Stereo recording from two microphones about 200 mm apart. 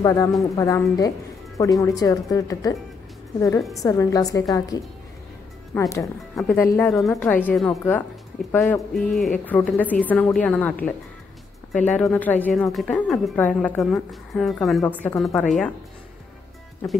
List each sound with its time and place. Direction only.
0.0 s a woman's voice: 15° left (ahead or behind)